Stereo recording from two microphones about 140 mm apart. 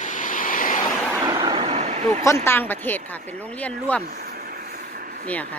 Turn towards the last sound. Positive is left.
turn(degrees=10)  # may be behind; listen again after turning